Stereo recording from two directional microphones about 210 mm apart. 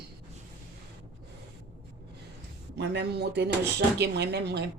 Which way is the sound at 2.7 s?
55° right (ahead or behind).